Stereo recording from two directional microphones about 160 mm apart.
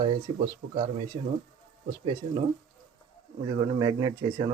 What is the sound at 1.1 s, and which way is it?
Speech, 45° right (ahead or behind).